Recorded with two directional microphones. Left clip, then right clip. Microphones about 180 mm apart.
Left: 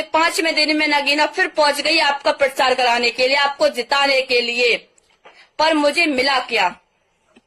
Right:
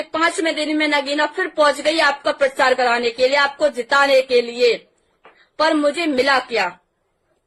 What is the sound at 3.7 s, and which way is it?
Speech, 15° right (ahead or behind).